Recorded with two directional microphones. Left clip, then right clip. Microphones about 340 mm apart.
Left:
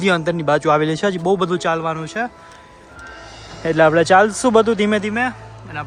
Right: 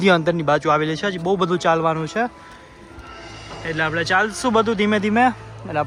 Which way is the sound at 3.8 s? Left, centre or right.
Centre.